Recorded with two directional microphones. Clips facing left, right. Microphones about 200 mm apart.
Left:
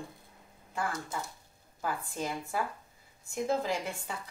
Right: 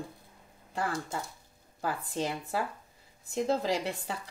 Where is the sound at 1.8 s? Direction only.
35° right (ahead or behind).